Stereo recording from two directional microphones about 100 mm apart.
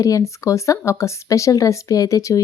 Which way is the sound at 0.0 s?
35° left (ahead or behind).